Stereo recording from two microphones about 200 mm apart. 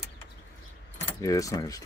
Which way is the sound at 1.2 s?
15° left (ahead or behind).